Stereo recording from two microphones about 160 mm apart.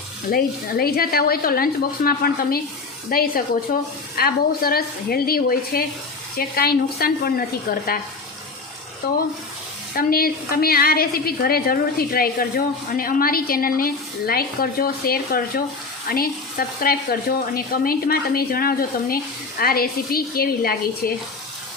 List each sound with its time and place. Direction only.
0.3 s a woman's voice: 70° left (ahead or behind)
9.0 s a woman's voice: 75° left (ahead or behind)